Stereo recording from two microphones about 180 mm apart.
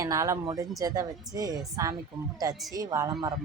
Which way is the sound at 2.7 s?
20° right (ahead or behind).